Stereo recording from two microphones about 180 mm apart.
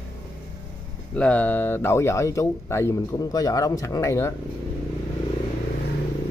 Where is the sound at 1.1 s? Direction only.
5° left (ahead or behind).